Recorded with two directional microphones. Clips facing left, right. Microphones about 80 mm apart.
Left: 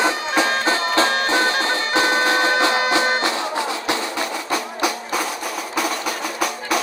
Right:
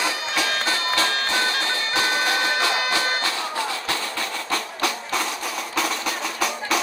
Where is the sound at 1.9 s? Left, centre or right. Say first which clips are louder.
Left 5 dB; left.